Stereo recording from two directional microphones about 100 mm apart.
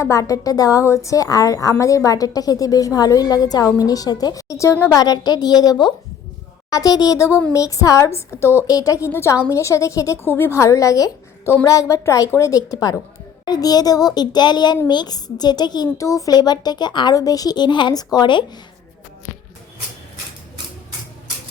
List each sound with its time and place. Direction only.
0.0 s a woman's voice: 30° left (ahead or behind); by 18.4 s 50° left (ahead or behind)